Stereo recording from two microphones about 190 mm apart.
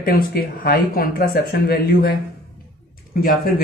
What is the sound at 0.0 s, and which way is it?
Speech, 55° left (ahead or behind).